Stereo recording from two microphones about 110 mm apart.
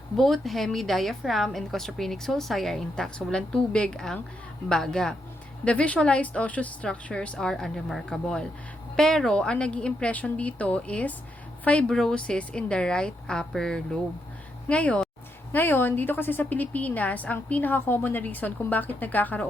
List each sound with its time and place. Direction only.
0.2 s a woman's voice: centre (ahead or behind)